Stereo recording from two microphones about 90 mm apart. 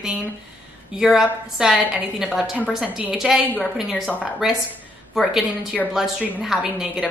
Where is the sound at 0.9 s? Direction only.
5° right (ahead or behind).